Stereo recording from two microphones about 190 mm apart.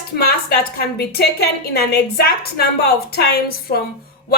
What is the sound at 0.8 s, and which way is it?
A woman's voice, 55° left (ahead or behind).